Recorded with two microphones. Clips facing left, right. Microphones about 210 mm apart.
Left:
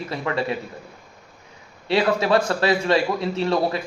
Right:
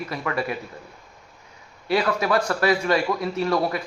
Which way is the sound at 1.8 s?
25° left (ahead or behind).